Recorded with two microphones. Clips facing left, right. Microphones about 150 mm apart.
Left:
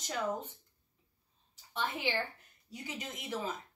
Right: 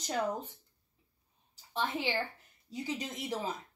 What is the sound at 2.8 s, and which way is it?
Speech, 35° right (ahead or behind).